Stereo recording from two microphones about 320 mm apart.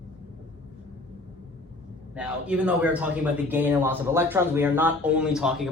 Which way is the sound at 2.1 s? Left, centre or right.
Centre.